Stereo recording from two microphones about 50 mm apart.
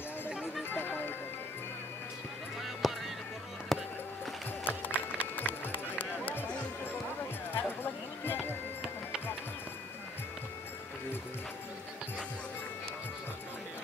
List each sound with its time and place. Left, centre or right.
0.3 s music: centre
0.7 s music: left
2.8 s music: centre
3.7 s a sound: centre
4.6 s music: left
7.5 s a sound: left